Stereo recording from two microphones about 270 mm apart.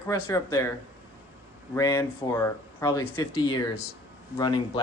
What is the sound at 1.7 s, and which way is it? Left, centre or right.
Speech, centre.